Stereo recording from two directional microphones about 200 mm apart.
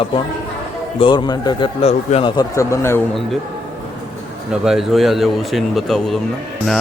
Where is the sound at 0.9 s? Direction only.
25° left (ahead or behind).